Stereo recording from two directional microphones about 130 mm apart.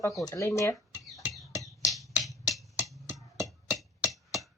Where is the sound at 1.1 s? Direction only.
Centre (ahead or behind).